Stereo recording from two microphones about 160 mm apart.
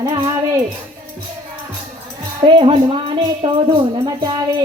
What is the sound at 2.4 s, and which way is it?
Speech, 30° right (ahead or behind).